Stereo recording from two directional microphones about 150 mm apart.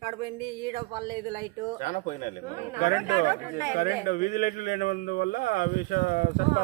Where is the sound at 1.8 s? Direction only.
55° left (ahead or behind); by 6.4 s 75° left (ahead or behind).